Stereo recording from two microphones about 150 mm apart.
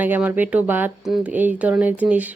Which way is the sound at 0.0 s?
10° right (ahead or behind).